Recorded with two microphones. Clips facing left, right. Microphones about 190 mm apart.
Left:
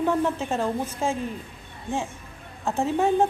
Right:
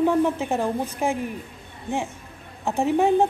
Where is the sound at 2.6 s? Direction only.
15° right (ahead or behind).